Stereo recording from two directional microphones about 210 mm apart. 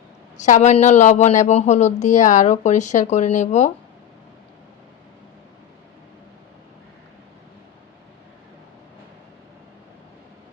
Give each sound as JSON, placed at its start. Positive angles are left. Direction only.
{"t": 0.3, "sound": "speech", "side_deg": 35}